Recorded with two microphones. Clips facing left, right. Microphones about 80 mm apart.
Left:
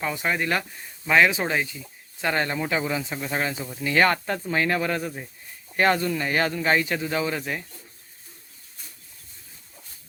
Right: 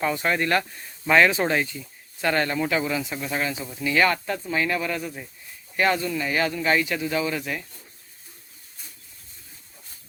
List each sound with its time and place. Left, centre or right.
0.0 s speech: centre
2.2 s speech: centre